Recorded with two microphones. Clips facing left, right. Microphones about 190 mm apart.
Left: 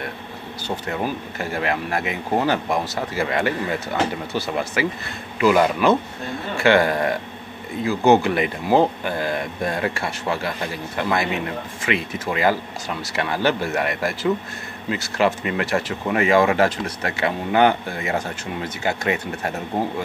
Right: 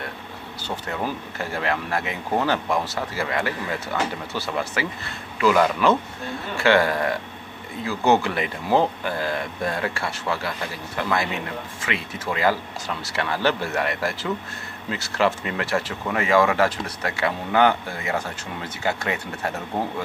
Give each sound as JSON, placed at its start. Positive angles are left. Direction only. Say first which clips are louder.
{"t": 0.7, "sound": "speech", "louder": "left 3 dB", "side_deg": 15}